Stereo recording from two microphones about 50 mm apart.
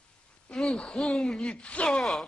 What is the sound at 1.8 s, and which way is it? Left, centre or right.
Speech, centre.